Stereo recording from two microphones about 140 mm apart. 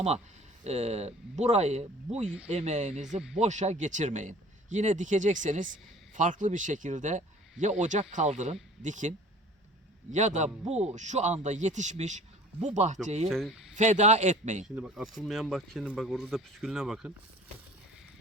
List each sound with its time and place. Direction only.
0.6 s speech: 55° right (ahead or behind)
13.2 s speech: centre (ahead or behind)
13.7 s speech: 60° right (ahead or behind)
14.8 s speech: 5° right (ahead or behind)